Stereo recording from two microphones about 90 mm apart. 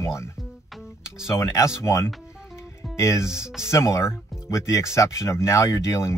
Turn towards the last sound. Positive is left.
turn(degrees=35)  # may be behind; listen again after turning